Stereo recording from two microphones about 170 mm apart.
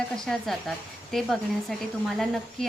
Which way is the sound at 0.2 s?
Centre (ahead or behind).